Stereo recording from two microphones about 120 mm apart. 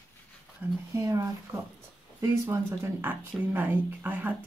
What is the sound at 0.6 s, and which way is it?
Speech, 15° right (ahead or behind).